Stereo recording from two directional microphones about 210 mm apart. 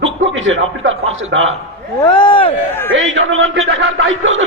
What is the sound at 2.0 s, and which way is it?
Speech, 20° left (ahead or behind).